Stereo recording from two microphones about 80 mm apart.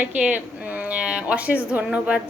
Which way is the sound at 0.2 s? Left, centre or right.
Centre.